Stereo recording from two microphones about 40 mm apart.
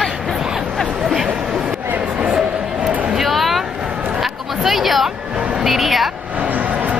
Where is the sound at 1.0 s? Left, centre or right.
Centre.